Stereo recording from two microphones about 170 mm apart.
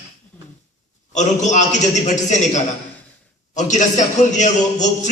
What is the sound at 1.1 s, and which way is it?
A man's voice, 45° left (ahead or behind).